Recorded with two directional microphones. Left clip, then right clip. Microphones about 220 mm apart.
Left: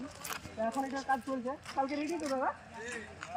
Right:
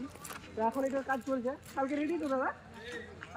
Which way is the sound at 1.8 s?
5° right (ahead or behind).